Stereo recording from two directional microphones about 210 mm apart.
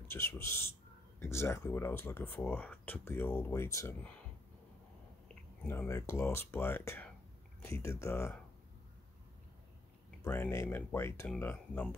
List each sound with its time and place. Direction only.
0.1 s speech: 10° left (ahead or behind)
5.3 s speech: 10° left (ahead or behind)
10.2 s speech: 10° left (ahead or behind)